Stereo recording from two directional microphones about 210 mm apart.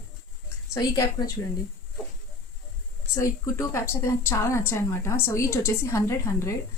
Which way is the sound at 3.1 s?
15° left (ahead or behind).